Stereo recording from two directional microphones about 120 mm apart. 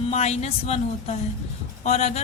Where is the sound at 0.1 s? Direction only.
65° left (ahead or behind).